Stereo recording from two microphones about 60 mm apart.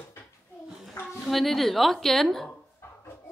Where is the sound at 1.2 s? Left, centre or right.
Centre.